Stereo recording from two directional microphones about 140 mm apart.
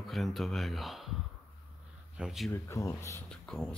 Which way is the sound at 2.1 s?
5° right (ahead or behind).